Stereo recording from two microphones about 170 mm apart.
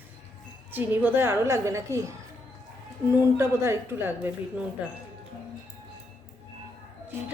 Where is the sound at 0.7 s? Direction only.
10° right (ahead or behind).